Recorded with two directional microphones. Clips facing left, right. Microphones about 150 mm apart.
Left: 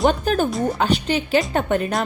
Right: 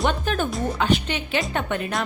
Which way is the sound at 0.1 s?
40° left (ahead or behind).